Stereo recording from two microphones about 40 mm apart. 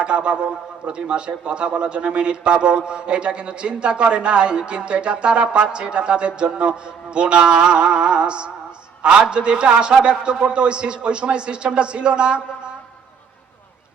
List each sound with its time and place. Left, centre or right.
0.0 s a man's voice: right